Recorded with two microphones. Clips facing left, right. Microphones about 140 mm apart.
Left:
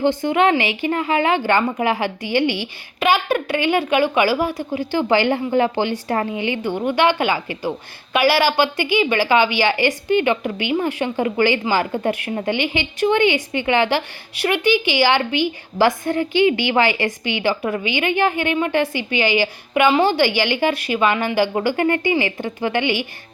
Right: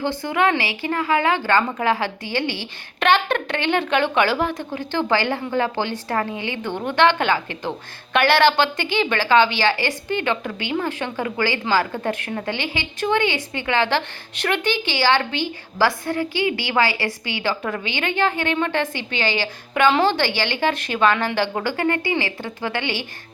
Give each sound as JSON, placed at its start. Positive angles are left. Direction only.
{"t": 0.0, "sound": "a woman's voice", "side_deg": 15}